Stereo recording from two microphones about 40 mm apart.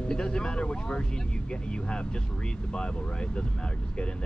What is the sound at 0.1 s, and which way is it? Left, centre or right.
Speech, left.